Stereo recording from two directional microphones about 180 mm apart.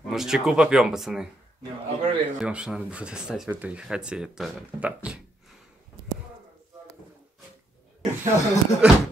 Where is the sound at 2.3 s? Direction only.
5° right (ahead or behind).